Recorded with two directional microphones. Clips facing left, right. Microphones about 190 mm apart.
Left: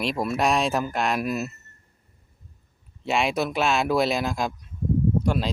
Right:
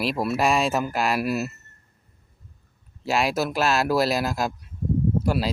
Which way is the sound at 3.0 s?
Centre (ahead or behind).